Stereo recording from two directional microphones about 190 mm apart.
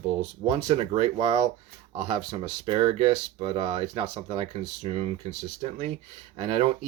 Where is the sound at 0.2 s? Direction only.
35° right (ahead or behind).